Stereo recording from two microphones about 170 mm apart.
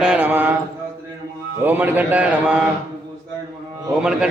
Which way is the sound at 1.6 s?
10° right (ahead or behind).